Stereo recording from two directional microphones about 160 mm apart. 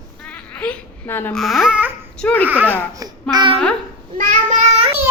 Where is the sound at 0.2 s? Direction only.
5° left (ahead or behind).